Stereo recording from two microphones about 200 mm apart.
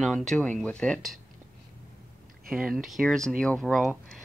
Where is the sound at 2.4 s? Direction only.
Centre (ahead or behind).